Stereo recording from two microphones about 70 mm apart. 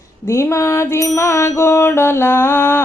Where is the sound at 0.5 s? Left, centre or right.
Left.